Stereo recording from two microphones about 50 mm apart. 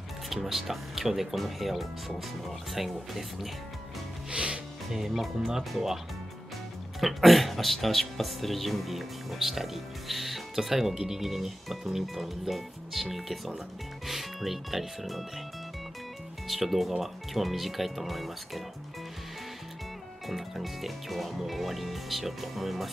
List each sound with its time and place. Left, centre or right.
0.3 s speech: centre
4.3 s music: right
4.9 s speech: centre
7.0 s speech: centre
16.4 s speech: centre
20.2 s speech: centre